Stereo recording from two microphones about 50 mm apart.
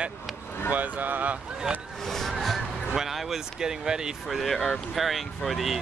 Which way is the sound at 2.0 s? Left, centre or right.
Centre.